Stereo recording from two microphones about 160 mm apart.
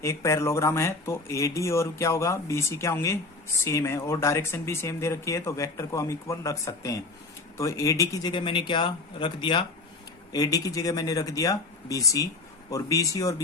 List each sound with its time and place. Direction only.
0.0 s speech: 15° left (ahead or behind)